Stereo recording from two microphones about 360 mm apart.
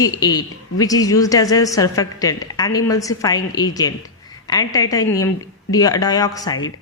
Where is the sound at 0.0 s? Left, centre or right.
Centre.